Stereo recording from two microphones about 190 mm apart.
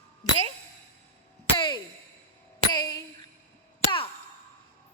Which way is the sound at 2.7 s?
20° left (ahead or behind).